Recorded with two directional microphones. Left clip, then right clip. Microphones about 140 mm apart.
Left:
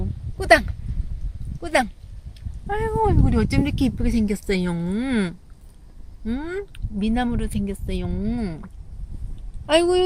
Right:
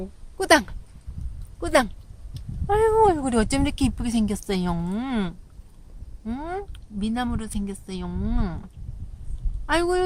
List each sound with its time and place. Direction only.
0.3 s speech: 15° right (ahead or behind)
9.6 s speech: 60° right (ahead or behind)